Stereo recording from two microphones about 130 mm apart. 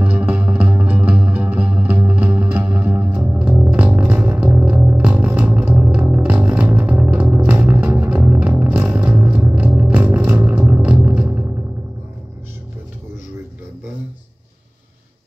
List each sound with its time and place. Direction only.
0.0 s music: 10° right (ahead or behind)